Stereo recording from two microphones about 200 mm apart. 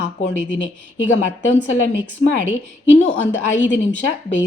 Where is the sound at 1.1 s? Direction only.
65° left (ahead or behind).